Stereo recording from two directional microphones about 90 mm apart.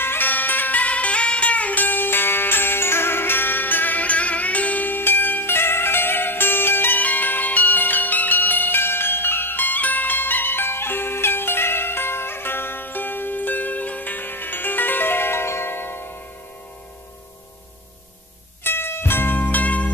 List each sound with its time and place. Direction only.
0.0 s music: 25° left (ahead or behind)
18.6 s music: 25° left (ahead or behind)